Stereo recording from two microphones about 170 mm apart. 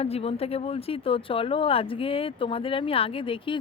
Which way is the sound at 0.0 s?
35° left (ahead or behind).